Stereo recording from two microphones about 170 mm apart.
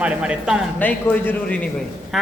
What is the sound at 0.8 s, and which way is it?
Speech, 10° left (ahead or behind).